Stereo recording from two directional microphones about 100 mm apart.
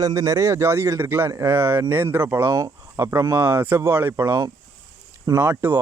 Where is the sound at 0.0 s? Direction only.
35° right (ahead or behind).